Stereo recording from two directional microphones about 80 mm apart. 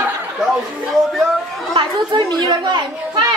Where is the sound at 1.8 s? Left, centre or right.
Right.